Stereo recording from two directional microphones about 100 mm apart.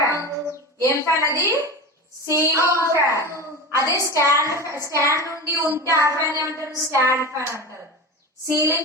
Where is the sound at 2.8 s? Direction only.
30° left (ahead or behind).